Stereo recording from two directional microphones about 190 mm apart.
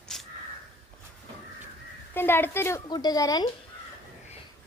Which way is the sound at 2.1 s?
10° left (ahead or behind).